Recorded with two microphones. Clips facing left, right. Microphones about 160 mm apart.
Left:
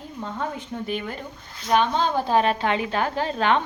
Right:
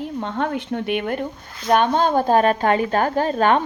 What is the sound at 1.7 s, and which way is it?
A woman's voice, 55° right (ahead or behind).